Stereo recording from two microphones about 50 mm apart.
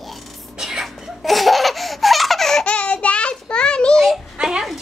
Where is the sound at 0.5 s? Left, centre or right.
Centre.